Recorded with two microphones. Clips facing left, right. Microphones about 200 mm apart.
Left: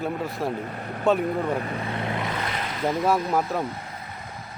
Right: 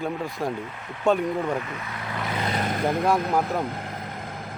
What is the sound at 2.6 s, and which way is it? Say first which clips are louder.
Vehicle: right 1 dB; 50° right (ahead or behind).